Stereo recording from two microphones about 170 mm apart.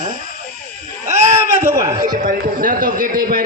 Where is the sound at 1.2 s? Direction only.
15° right (ahead or behind).